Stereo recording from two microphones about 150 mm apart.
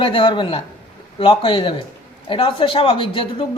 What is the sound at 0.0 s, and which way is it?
A woman's voice, 35° left (ahead or behind).